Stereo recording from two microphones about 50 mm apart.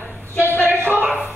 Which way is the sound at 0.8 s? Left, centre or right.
Right.